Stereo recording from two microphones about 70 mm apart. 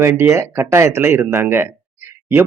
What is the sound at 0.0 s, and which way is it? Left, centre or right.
Speech, right.